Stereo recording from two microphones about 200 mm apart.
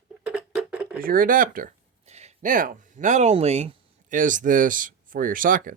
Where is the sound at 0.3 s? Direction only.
5° right (ahead or behind).